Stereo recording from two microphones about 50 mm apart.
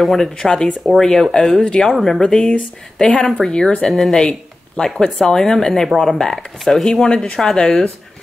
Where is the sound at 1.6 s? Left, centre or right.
Left.